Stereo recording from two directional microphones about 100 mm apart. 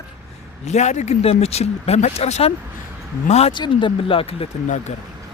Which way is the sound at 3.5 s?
55° left (ahead or behind).